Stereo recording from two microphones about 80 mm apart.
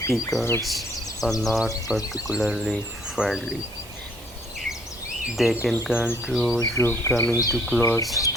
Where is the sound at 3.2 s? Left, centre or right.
Centre.